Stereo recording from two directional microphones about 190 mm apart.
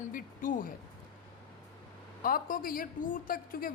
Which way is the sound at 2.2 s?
50° left (ahead or behind).